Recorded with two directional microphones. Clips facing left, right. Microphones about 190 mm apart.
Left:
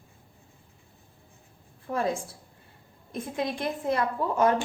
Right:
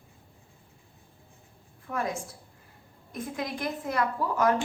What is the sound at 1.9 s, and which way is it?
A woman's voice, 30° left (ahead or behind).